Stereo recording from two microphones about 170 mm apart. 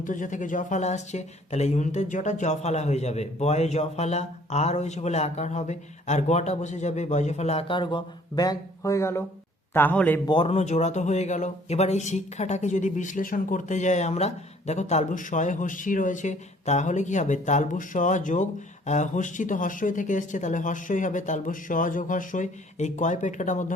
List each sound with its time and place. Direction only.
0.0 s a man's voice: 50° left (ahead or behind); by 10.2 s 10° left (ahead or behind)
10.2 s speech: 30° left (ahead or behind); by 23.7 s 45° left (ahead or behind)